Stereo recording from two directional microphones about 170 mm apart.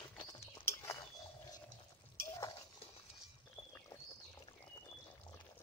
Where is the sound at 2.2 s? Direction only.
20° left (ahead or behind).